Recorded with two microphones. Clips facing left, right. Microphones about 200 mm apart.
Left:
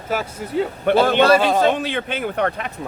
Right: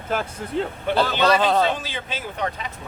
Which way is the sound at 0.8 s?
55° left (ahead or behind).